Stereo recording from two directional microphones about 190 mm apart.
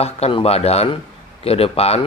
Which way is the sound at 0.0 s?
30° left (ahead or behind).